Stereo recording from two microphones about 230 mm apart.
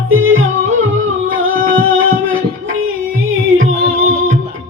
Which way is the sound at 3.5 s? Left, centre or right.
Right.